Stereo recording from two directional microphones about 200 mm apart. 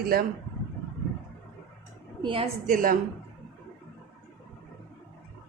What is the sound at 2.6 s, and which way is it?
Speech, 40° right (ahead or behind).